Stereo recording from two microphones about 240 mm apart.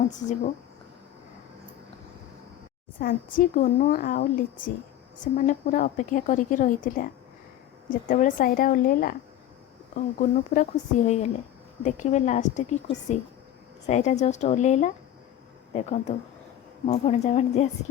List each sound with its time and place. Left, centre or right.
3.0 s a woman's voice: left
13.8 s a woman's voice: left